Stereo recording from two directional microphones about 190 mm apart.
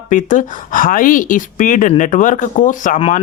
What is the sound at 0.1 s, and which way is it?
Speech, 40° left (ahead or behind).